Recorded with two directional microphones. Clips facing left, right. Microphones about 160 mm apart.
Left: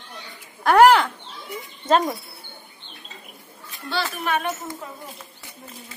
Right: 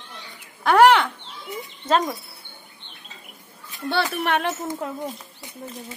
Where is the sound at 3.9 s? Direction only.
70° right (ahead or behind).